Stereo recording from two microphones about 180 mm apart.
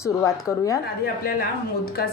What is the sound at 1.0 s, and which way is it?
Speech, 55° left (ahead or behind).